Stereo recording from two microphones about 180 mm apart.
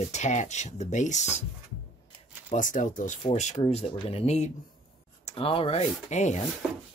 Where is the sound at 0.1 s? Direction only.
40° left (ahead or behind).